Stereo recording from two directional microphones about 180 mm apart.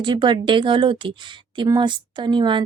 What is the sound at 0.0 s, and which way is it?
Speech, 25° right (ahead or behind).